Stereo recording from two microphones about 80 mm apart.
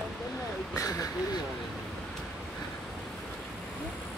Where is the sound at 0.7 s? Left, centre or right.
Left.